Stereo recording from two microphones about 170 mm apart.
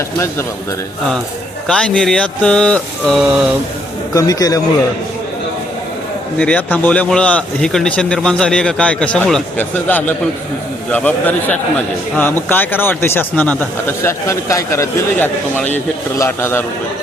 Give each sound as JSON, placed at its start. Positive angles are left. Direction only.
{"t": 1.6, "sound": "speech", "side_deg": 5}
{"t": 4.1, "sound": "a man's voice", "side_deg": 20}
{"t": 6.4, "sound": "speech", "side_deg": 10}